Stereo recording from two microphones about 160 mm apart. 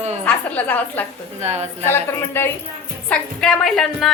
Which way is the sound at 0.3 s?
10° left (ahead or behind).